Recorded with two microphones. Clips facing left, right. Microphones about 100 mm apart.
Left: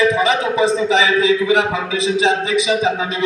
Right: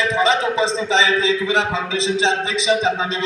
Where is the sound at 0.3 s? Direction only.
15° left (ahead or behind).